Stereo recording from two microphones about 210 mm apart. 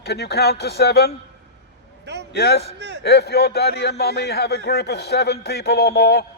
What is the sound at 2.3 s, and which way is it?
A man's voice, 50° left (ahead or behind).